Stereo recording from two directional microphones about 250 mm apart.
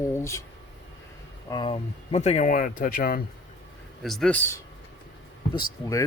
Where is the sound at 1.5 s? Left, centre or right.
Centre; by 3.2 s left.